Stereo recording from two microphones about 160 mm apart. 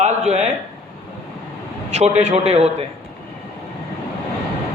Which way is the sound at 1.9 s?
45° right (ahead or behind).